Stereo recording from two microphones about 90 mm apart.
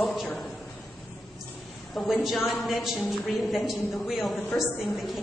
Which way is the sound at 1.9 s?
Centre (ahead or behind).